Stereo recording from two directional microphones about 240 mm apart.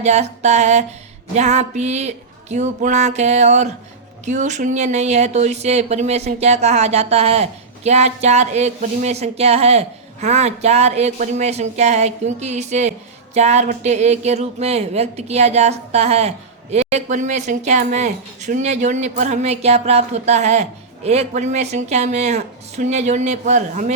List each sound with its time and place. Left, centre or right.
0.0 s speech: right